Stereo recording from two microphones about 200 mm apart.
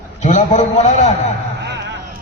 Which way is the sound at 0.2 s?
35° left (ahead or behind).